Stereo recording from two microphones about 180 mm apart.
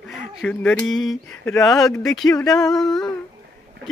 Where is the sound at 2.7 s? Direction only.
Centre (ahead or behind).